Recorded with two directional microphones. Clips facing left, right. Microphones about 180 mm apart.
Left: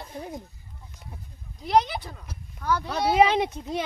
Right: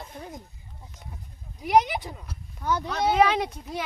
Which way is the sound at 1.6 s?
10° right (ahead or behind).